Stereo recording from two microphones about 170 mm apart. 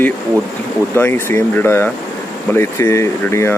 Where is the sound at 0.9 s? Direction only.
10° left (ahead or behind).